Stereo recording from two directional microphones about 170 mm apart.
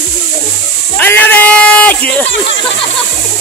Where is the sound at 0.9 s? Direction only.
10° left (ahead or behind).